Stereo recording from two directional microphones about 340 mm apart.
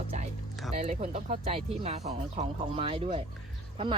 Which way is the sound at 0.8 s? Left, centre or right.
Centre.